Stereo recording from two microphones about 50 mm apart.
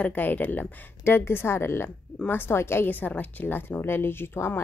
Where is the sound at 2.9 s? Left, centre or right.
Left.